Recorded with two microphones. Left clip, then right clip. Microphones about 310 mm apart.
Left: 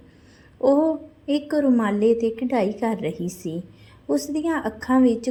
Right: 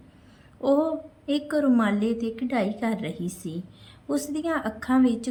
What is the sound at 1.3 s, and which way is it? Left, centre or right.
A woman's voice, centre.